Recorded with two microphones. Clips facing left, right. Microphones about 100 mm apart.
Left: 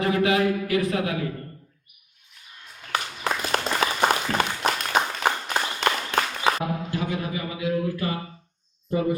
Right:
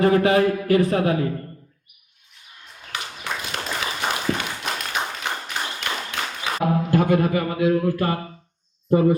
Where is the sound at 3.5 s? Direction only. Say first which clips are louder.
Left 5 dB; 40° left (ahead or behind).